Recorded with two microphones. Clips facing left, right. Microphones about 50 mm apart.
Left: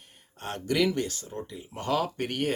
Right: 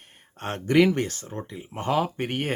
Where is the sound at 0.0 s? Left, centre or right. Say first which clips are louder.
Right 4 dB; right.